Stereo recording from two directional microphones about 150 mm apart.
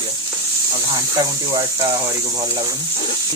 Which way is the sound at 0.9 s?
25° right (ahead or behind).